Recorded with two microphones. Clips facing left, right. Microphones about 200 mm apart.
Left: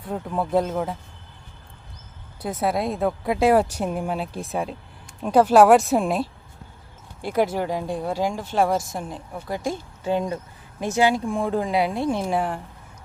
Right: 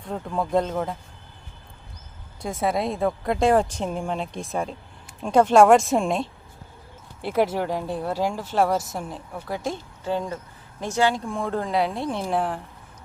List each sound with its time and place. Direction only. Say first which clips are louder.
0.0 s speech: left 1 dB; 5° left (ahead or behind)
2.4 s speech: left 1 dB; centre (ahead or behind)
10.0 s speech: left 3 dB; 15° left (ahead or behind)
10.8 s speech: left 2 dB; 5° left (ahead or behind)